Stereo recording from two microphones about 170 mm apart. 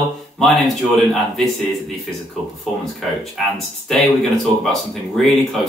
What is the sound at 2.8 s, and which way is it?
Speech, centre (ahead or behind).